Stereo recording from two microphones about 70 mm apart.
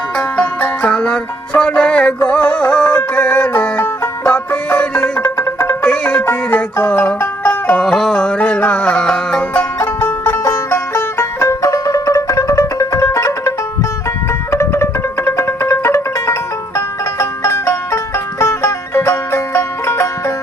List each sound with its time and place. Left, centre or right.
0.3 s music: centre
5.8 s music: centre
7.8 s music: centre
9.7 s music: left
14.5 s music: left